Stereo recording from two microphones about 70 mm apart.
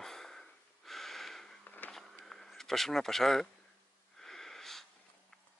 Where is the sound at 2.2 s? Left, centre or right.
Centre.